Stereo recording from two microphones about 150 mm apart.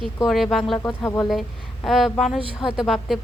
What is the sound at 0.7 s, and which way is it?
Speech, 20° left (ahead or behind).